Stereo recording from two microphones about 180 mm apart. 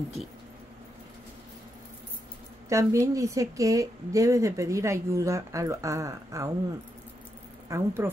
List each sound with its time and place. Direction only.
2.7 s a woman's voice: 15° right (ahead or behind)
7.6 s speech: 15° right (ahead or behind)